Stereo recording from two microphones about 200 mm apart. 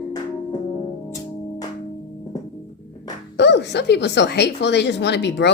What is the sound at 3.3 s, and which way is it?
A woman's voice, 60° left (ahead or behind).